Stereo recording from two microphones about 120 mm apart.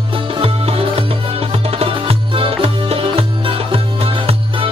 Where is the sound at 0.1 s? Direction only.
50° right (ahead or behind).